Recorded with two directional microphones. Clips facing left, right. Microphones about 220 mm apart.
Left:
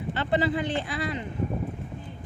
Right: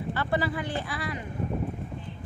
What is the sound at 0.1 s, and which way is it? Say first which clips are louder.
Speech: left 4 dB; 20° left (ahead or behind).